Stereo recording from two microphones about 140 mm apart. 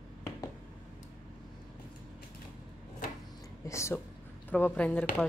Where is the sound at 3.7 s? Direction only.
20° left (ahead or behind).